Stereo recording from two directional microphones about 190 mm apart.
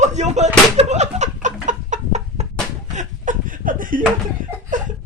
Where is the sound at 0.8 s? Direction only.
35° right (ahead or behind).